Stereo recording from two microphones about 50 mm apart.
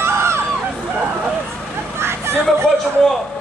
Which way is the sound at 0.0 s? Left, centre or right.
Right.